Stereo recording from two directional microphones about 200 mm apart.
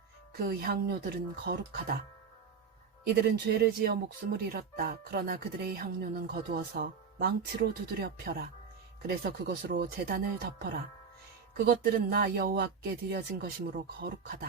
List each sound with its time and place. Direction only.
0.3 s speech: 50° right (ahead or behind)
3.5 s speech: 50° right (ahead or behind)
11.5 s speech: 50° right (ahead or behind)